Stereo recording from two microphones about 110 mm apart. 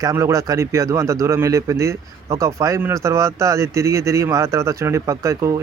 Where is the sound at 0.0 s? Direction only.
30° right (ahead or behind).